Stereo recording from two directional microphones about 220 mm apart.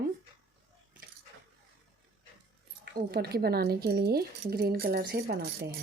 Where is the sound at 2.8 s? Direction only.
45° right (ahead or behind).